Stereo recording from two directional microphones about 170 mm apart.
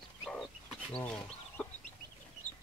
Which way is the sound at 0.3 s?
Centre (ahead or behind).